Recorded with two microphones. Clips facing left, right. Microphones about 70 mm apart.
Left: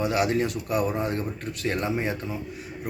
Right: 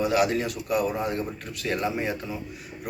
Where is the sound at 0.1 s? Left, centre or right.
Left.